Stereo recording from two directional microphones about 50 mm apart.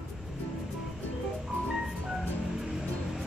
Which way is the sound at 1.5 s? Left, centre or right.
Centre.